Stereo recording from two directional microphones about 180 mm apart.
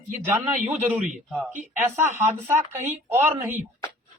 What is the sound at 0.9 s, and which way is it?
Speech, 45° right (ahead or behind).